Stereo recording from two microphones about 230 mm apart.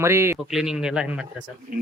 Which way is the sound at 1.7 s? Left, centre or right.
Right.